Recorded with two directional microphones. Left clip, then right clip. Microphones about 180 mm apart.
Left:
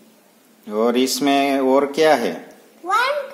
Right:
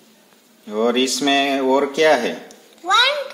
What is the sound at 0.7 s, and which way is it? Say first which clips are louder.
Speech: even; 25° left (ahead or behind).